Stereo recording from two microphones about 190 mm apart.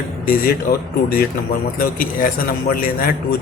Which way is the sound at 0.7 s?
50° left (ahead or behind).